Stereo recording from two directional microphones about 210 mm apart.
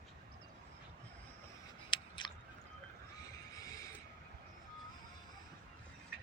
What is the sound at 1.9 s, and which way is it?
Scissors, 20° left (ahead or behind).